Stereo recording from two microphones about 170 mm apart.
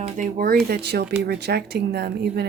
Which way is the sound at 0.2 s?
60° right (ahead or behind).